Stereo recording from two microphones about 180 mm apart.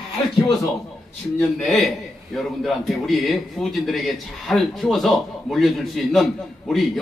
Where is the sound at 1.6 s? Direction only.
Centre (ahead or behind).